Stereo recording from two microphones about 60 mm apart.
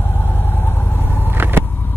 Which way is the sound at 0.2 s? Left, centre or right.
Left.